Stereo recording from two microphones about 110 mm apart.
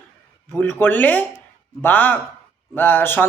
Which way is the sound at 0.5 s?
15° left (ahead or behind).